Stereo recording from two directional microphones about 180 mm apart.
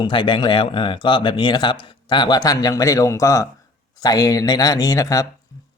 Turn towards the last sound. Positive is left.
turn(degrees=20)  # may be behind; listen again after turning